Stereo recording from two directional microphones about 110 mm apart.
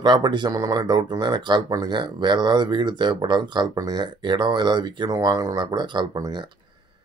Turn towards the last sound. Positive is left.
turn(degrees=-40)  # may be behind; listen again after turning